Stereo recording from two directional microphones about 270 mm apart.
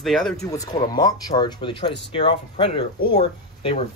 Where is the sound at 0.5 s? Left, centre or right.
Centre.